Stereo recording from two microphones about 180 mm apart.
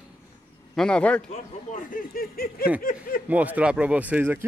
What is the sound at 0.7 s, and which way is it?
Speech, 5° left (ahead or behind).